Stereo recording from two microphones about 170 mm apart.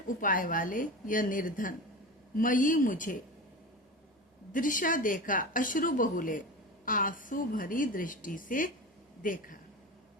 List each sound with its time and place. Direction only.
0.2 s a woman's voice: 55° left (ahead or behind)
4.5 s a woman's voice: 55° left (ahead or behind)